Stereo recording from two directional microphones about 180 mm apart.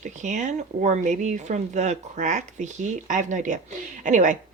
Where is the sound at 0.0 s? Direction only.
40° right (ahead or behind).